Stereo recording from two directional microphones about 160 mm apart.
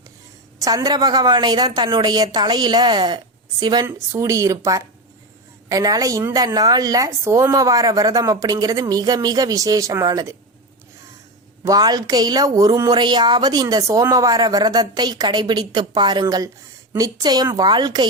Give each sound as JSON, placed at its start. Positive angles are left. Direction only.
{"t": 0.6, "sound": "a woman's voice", "side_deg": -20}
{"t": 11.6, "sound": "a woman's voice", "side_deg": -25}